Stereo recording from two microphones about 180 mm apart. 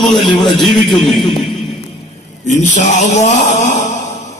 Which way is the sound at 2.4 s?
40° left (ahead or behind).